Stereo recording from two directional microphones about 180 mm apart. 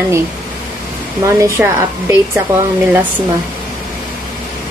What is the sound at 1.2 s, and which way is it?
Speech, 15° right (ahead or behind).